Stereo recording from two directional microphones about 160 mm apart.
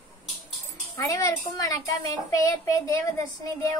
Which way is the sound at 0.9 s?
20° left (ahead or behind).